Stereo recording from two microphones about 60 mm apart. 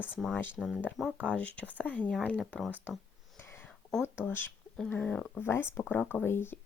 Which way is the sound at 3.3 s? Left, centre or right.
Left.